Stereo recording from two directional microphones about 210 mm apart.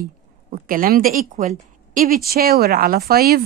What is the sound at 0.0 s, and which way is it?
Speech, 45° right (ahead or behind).